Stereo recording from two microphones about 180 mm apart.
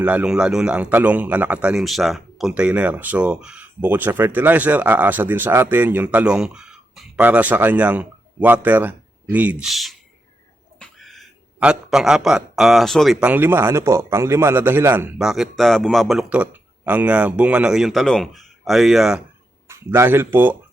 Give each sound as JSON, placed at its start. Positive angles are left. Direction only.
{"t": 0.0, "sound": "a man's voice", "side_deg": -5}
{"t": 19.6, "sound": "speech", "side_deg": -15}